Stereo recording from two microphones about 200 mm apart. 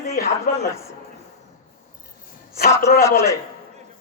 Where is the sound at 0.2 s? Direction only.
45° left (ahead or behind).